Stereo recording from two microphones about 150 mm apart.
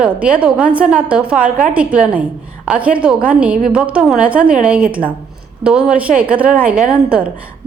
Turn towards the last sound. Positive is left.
turn(degrees=-10)  # may be behind; listen again after turning